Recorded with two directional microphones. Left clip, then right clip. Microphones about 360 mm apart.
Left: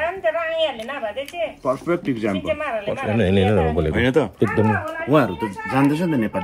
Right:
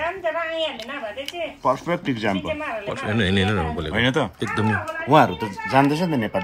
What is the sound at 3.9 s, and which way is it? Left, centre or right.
Speech, right.